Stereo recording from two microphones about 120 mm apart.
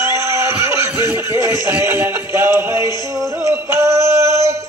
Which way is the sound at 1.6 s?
15° right (ahead or behind).